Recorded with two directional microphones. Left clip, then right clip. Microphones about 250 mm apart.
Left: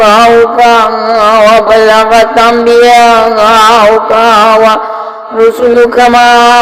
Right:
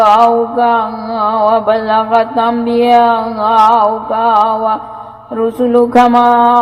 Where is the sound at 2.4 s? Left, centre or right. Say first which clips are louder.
Left 9 dB; centre.